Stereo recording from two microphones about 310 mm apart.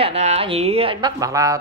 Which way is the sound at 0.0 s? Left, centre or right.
Centre.